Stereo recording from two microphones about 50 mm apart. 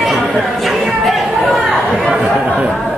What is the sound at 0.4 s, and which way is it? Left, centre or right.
Speech, centre.